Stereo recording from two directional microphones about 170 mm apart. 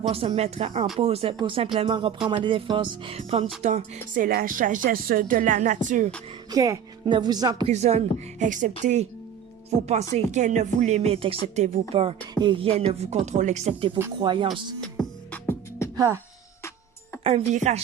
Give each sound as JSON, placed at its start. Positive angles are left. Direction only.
{"t": 0.1, "sound": "speech", "side_deg": -35}
{"t": 6.5, "sound": "speech", "side_deg": -20}
{"t": 7.7, "sound": "speech", "side_deg": -40}
{"t": 12.3, "sound": "speech", "side_deg": -25}
{"t": 14.2, "sound": "speech", "side_deg": -30}
{"t": 14.8, "sound": "music", "side_deg": 5}
{"t": 16.0, "sound": "speech", "side_deg": -15}
{"t": 17.2, "sound": "speech", "side_deg": -40}